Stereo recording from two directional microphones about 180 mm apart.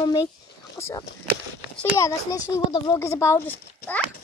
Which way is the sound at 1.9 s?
20° left (ahead or behind).